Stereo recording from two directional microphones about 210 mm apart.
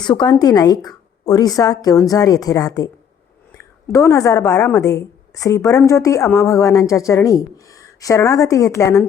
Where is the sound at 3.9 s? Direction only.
15° left (ahead or behind).